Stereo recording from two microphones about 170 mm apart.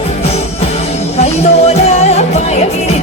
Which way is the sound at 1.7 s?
40° left (ahead or behind).